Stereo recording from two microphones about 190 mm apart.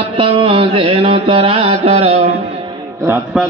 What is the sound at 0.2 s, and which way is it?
Mantra, 30° right (ahead or behind).